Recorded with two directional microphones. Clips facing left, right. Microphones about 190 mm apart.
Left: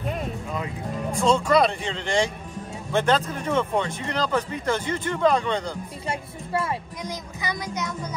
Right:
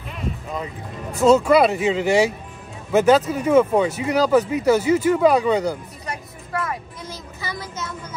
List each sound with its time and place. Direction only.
1.2 s speech: 5° right (ahead or behind)
6.0 s music: 30° left (ahead or behind)
7.0 s speech: 15° left (ahead or behind)